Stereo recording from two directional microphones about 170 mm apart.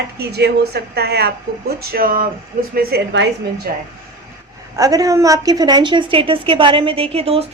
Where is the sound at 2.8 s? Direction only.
80° right.